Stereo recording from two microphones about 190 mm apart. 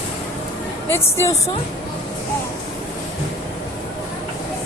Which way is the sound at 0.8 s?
15° left (ahead or behind).